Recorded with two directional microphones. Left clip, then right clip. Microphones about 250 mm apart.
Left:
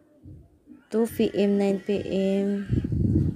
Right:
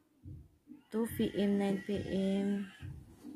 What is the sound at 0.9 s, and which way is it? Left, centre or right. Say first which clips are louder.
A woman's voice: left 12 dB; centre.